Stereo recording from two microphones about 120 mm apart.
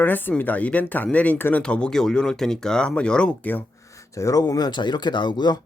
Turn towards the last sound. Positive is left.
turn(degrees=35)  # may be behind; listen again after turning